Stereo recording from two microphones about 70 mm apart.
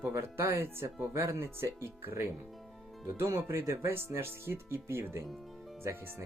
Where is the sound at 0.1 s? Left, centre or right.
Right.